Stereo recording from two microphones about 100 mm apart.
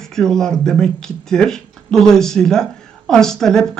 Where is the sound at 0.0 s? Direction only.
5° left (ahead or behind).